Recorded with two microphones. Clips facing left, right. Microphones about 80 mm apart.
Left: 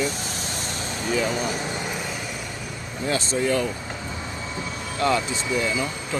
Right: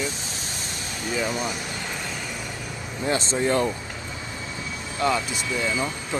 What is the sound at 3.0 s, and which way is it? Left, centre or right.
Speech, right.